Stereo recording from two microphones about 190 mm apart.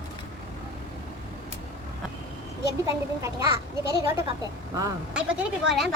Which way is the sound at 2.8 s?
15° right (ahead or behind).